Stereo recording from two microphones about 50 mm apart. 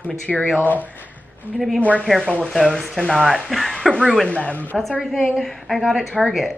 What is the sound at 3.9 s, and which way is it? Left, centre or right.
Speech, centre.